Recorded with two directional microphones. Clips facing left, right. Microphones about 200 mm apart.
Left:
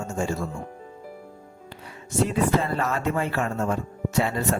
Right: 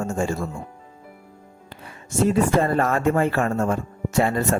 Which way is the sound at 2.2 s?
50° right (ahead or behind).